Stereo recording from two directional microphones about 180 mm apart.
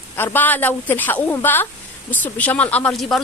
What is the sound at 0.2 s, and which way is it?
A woman's voice, 10° left (ahead or behind).